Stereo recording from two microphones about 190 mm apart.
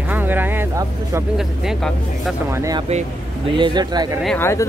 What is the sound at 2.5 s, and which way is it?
Speech, 15° right (ahead or behind).